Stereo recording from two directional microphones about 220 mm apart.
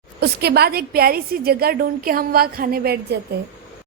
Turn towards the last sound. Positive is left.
turn(degrees=-45)  # may be behind; listen again after turning